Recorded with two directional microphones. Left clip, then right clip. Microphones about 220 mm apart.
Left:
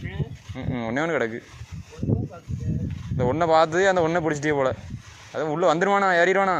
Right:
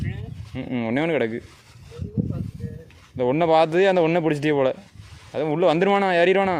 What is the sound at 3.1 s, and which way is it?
Speech, 40° right (ahead or behind).